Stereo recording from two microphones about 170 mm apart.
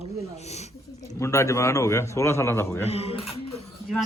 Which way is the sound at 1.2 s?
15° left (ahead or behind).